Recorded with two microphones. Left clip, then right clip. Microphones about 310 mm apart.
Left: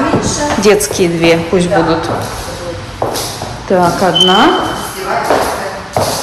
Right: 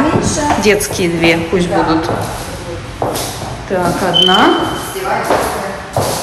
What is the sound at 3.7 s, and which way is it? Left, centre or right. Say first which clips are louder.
Speech: left 6 dB; centre.